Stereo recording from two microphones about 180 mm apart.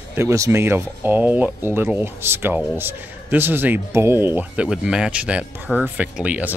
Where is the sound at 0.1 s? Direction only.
15° right (ahead or behind).